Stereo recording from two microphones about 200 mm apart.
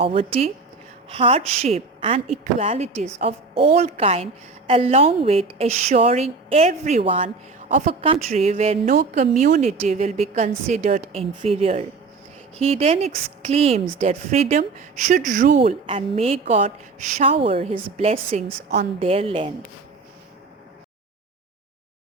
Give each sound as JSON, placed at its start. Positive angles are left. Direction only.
{"t": 0.0, "sound": "a woman's voice", "side_deg": -25}
{"t": 15.5, "sound": "a woman's voice", "side_deg": -30}